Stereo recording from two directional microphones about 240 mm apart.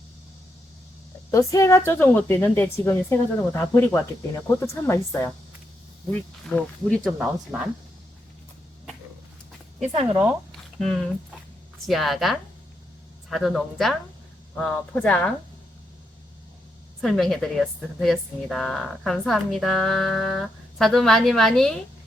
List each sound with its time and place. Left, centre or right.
1.3 s a woman's voice: centre
10.0 s speech: right
11.9 s speech: centre
17.0 s speech: centre